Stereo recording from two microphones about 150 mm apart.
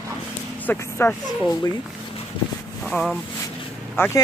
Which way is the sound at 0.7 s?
10° left (ahead or behind).